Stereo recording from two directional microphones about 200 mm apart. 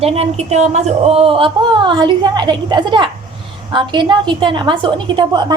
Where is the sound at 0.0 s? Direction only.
30° right (ahead or behind).